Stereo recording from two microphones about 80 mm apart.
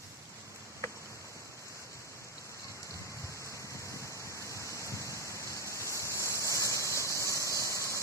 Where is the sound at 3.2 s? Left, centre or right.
Left.